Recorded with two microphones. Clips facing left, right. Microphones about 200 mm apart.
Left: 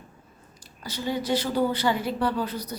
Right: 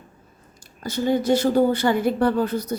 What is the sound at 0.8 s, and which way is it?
Speech, 50° right (ahead or behind).